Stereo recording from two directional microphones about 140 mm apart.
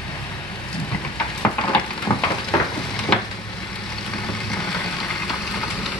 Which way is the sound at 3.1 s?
5° left (ahead or behind).